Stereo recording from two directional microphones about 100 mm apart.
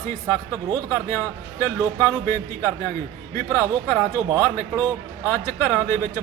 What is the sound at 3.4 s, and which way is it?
Speech, 25° left (ahead or behind).